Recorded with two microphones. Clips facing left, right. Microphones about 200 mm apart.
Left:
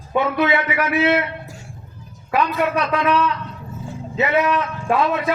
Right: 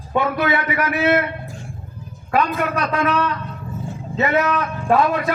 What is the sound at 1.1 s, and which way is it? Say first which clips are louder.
Speech: right 1 dB; 50° right (ahead or behind).